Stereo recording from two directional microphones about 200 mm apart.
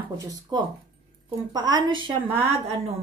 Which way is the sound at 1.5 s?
20° right (ahead or behind).